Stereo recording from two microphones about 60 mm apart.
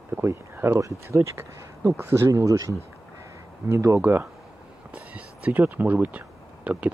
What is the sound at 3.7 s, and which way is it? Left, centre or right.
Speech, right.